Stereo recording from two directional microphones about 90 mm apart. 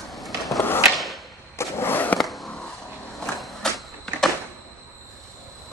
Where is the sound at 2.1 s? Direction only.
Centre (ahead or behind).